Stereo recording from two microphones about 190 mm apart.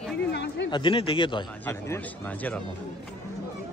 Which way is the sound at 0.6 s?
25° left (ahead or behind).